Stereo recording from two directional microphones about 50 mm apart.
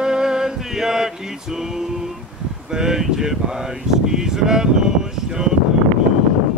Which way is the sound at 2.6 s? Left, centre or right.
Centre.